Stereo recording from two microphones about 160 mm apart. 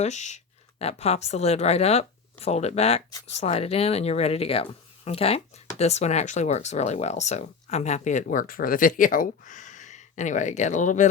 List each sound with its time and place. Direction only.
0.0 s speech: 45° left (ahead or behind)